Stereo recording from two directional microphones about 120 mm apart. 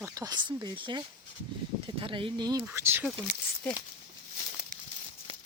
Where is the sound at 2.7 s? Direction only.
20° right (ahead or behind).